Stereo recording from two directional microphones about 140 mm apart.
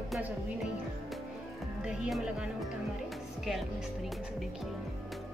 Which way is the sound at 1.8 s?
5° right (ahead or behind).